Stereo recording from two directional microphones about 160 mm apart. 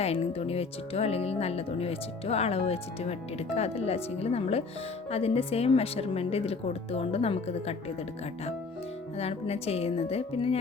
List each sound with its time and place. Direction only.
0.0 s speech: 40° left (ahead or behind)
9.1 s speech: 40° left (ahead or behind)